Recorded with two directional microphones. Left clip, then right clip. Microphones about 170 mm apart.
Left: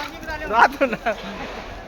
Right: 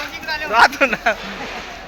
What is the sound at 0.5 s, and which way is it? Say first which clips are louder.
Speech: right 3 dB; 20° left (ahead or behind).